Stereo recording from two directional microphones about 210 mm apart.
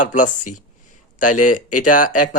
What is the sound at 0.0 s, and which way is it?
Speech, 35° left (ahead or behind).